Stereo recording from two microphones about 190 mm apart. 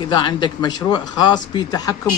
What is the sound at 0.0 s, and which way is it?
Speech, 25° left (ahead or behind).